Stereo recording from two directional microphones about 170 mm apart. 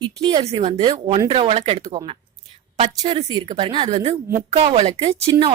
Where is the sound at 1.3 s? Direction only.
35° right (ahead or behind).